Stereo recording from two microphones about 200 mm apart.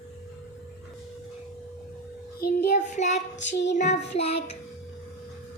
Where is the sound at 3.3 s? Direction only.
60° left (ahead or behind).